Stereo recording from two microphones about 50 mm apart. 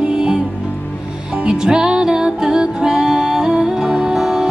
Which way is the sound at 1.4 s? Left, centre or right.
Centre.